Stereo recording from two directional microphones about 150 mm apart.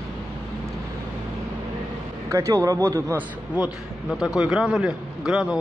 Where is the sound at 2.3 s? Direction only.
20° right (ahead or behind).